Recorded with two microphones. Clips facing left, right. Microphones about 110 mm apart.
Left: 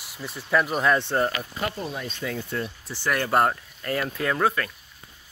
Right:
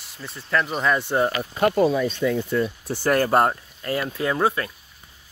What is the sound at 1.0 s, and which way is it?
Speech, 10° right (ahead or behind).